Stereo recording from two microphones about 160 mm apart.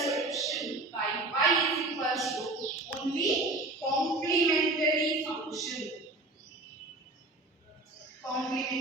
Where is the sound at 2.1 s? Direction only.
Centre (ahead or behind).